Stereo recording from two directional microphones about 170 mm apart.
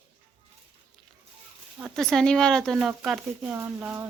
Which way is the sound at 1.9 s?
5° left (ahead or behind).